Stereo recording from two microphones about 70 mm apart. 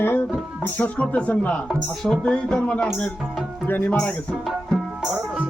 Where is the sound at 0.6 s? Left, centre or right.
Left.